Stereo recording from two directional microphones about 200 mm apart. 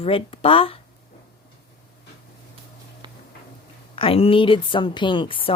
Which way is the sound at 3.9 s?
30° left (ahead or behind).